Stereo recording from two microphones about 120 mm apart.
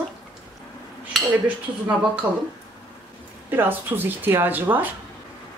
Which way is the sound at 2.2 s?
15° right (ahead or behind).